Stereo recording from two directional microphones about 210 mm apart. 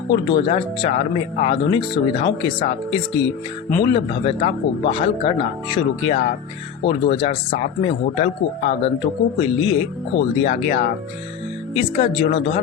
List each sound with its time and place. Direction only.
0.1 s speech: 25° left (ahead or behind)